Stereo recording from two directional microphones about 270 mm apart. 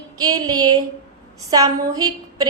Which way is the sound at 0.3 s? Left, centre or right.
Centre.